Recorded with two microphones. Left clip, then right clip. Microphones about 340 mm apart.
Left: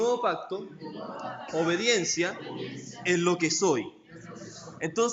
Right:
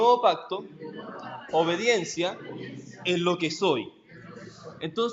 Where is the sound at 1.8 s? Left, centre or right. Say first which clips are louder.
Right 1 dB; centre.